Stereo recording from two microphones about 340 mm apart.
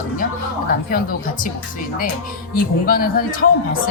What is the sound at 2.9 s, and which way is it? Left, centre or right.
Speech, left.